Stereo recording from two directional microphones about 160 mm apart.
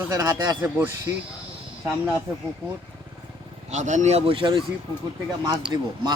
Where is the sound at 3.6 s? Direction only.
50° right (ahead or behind); by 4.6 s 30° right (ahead or behind).